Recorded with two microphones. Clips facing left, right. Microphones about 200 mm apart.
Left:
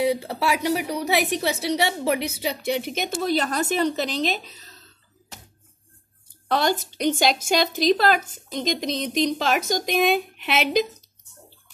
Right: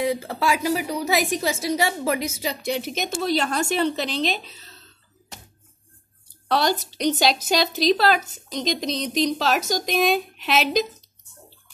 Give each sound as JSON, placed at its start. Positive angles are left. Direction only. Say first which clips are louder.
{"t": 0.0, "sound": "speech", "louder": "left 2 dB", "side_deg": 5}
{"t": 0.4, "sound": "a woman's voice", "louder": "right 1 dB", "side_deg": 70}
{"t": 6.5, "sound": "speech", "louder": "even", "side_deg": 50}